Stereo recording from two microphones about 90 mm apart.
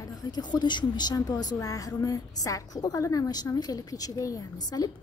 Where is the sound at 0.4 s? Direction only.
55° left (ahead or behind).